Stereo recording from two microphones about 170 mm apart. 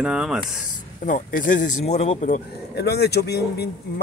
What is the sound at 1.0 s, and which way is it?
Speech, 50° left (ahead or behind).